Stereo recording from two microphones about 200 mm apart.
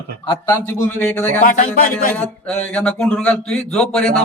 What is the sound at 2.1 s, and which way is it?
Speech, 5° left (ahead or behind).